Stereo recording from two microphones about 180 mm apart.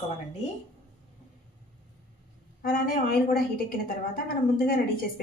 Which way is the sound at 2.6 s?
50° left (ahead or behind).